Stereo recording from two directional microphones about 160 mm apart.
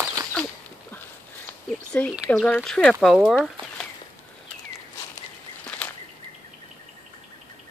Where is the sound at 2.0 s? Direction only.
10° left (ahead or behind).